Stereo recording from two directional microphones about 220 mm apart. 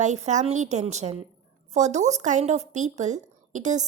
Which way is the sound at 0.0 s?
35° right (ahead or behind).